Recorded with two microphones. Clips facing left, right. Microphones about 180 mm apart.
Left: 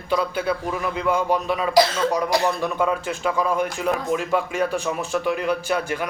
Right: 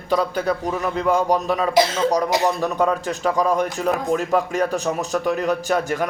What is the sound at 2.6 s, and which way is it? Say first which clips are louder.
Speech: right 2 dB; 40° right (ahead or behind).